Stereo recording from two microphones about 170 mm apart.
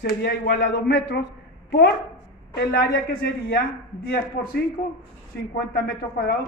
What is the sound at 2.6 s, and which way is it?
A man's voice, 70° left (ahead or behind).